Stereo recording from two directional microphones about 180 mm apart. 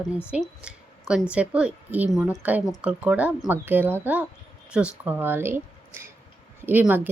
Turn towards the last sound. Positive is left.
turn(degrees=-10)  # may be behind; listen again after turning